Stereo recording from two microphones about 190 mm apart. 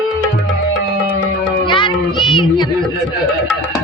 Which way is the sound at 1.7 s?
25° left (ahead or behind).